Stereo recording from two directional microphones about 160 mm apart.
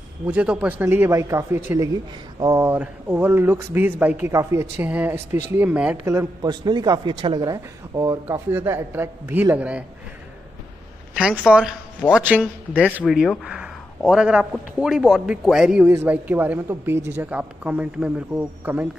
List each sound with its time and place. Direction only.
0.3 s a man's voice: 10° right (ahead or behind)
11.1 s a man's voice: 5° right (ahead or behind)
12.0 s a man's voice: 15° left (ahead or behind)
12.7 s a man's voice: 5° right (ahead or behind)